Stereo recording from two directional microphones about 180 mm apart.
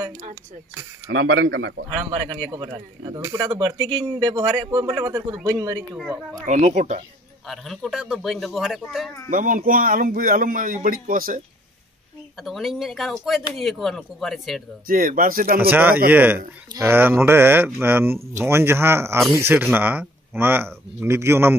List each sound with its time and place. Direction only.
1.0 s speech: 90° right
2.0 s speech: 25° right (ahead or behind)
5.9 s a man's voice: centre (ahead or behind)
6.4 s a man's voice: 40° right (ahead or behind)
7.4 s a man's voice: centre (ahead or behind)
9.3 s a man's voice: 50° right (ahead or behind)
12.4 s a man's voice: centre (ahead or behind)
14.9 s a man's voice: 50° right (ahead or behind)
15.7 s speech: 10° right (ahead or behind)